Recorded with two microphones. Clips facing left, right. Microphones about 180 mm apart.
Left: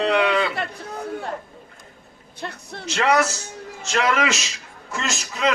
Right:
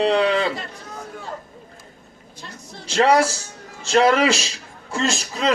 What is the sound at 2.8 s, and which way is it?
A man's voice, 30° right (ahead or behind).